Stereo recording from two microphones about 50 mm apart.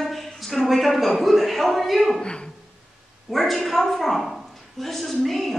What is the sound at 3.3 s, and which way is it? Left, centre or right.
A woman's voice, centre.